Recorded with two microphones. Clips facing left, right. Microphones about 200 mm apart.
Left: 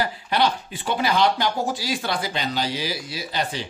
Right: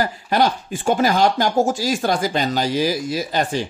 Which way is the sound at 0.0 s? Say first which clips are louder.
Right 4 dB; 45° right (ahead or behind).